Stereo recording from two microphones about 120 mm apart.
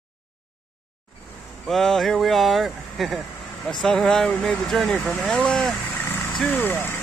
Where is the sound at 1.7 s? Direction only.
Centre (ahead or behind).